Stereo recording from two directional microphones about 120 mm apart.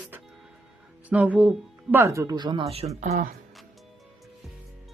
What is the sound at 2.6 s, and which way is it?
Speech, 55° right (ahead or behind).